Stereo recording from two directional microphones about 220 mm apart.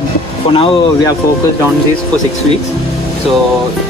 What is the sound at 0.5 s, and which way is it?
Speech, 25° left (ahead or behind).